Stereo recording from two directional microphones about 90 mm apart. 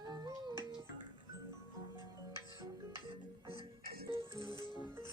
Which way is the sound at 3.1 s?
65° right (ahead or behind).